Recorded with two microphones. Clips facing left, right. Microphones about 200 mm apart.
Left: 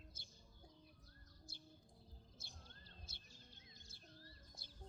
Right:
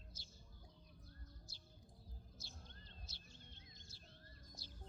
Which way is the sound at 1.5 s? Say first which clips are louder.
Left 5 dB; 55° left (ahead or behind).